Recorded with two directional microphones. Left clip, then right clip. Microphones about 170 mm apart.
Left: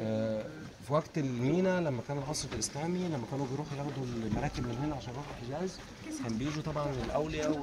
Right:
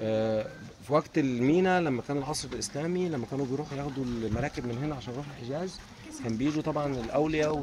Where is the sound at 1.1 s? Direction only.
65° left (ahead or behind).